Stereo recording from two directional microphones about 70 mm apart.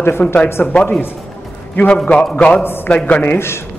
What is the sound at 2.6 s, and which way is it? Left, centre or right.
Speech, left.